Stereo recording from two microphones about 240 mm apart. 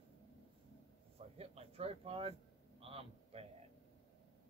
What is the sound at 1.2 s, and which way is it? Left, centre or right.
Speech, right.